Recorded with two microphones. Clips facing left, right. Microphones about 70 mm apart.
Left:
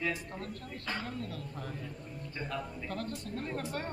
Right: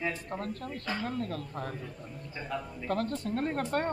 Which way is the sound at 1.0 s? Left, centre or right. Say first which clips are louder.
Right 6 dB; right.